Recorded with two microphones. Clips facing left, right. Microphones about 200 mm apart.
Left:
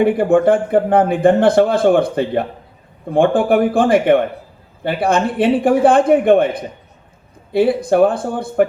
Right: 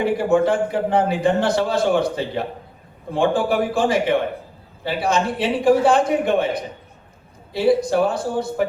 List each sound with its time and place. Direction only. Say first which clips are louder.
0.0 s a man's voice: left 5 dB; 55° left (ahead or behind)